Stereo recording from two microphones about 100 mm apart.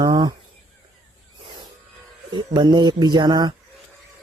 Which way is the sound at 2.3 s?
50° right (ahead or behind).